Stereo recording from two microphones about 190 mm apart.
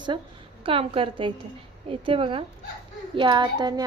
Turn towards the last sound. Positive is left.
turn(degrees=-20)  # may be behind; listen again after turning